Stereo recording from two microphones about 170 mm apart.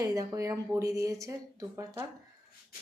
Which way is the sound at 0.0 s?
20° right (ahead or behind).